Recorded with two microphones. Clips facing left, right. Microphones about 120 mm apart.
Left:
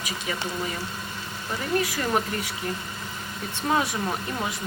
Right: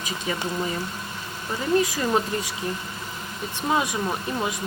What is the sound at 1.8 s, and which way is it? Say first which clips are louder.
Speech: right 2 dB; 15° right (ahead or behind).